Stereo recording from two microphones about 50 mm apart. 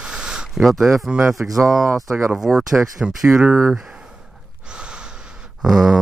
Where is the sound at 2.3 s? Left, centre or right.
Centre.